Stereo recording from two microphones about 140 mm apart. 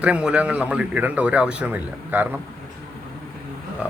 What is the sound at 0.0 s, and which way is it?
Speech, 10° right (ahead or behind).